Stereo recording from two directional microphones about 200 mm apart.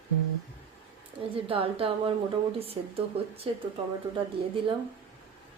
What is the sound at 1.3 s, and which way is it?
Speech, 25° right (ahead or behind).